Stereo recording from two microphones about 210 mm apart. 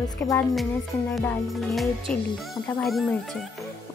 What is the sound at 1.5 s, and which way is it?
Speech, centre (ahead or behind).